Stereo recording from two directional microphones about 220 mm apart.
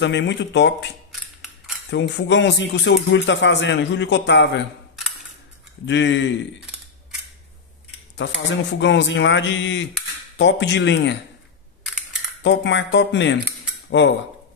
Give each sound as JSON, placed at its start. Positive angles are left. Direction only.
{"t": 0.0, "sound": "speech", "side_deg": 55}
{"t": 1.9, "sound": "speech", "side_deg": 55}
{"t": 5.9, "sound": "speech", "side_deg": 55}
{"t": 8.2, "sound": "speech", "side_deg": 55}
{"t": 11.8, "sound": "camera", "side_deg": 0}
{"t": 12.4, "sound": "speech", "side_deg": 55}